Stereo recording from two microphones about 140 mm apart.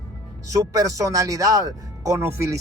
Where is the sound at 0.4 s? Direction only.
25° right (ahead or behind).